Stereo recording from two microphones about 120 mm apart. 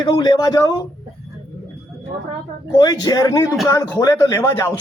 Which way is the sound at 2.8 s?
35° left (ahead or behind).